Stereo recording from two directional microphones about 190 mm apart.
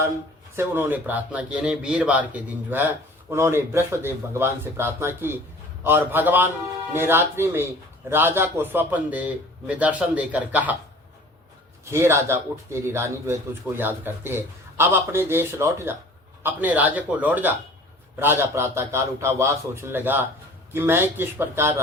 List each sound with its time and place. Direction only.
0.5 s speech: 10° right (ahead or behind)
11.9 s speech: 15° right (ahead or behind)